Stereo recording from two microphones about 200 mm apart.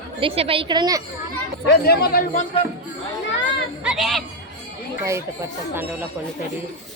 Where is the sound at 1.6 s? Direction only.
50° left (ahead or behind).